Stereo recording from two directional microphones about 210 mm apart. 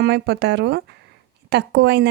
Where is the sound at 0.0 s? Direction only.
55° right (ahead or behind).